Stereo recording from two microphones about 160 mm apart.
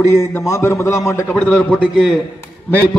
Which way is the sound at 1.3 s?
5° left (ahead or behind).